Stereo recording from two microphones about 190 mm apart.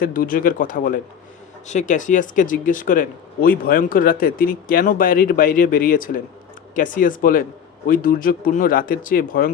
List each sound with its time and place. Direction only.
0.0 s speech: 45° left (ahead or behind)